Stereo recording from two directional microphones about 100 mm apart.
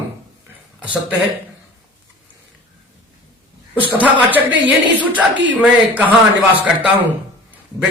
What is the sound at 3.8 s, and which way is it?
Speech, 15° right (ahead or behind).